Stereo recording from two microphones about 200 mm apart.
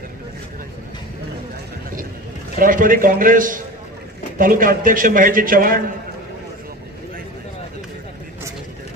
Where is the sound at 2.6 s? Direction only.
45° right (ahead or behind).